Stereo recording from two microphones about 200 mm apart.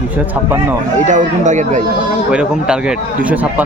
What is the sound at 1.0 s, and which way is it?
Speech, 40° right (ahead or behind).